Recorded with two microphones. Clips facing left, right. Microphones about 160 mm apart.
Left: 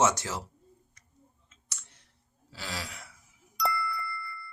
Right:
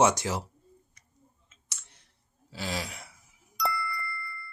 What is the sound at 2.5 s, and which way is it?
Speech, 20° right (ahead or behind).